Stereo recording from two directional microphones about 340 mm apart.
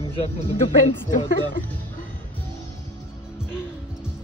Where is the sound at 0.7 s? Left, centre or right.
Centre.